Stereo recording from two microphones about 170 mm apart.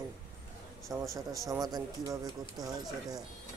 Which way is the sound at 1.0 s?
20° right (ahead or behind).